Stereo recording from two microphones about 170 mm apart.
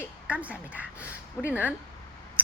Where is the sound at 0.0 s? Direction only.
10° right (ahead or behind).